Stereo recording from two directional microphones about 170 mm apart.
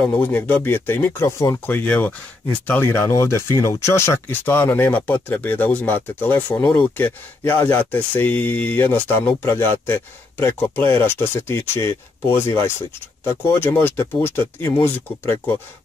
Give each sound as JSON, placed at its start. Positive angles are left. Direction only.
{"t": 0.0, "sound": "speech", "side_deg": 10}